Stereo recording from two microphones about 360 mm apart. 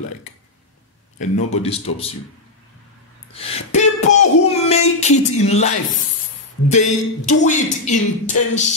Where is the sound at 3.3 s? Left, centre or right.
Centre.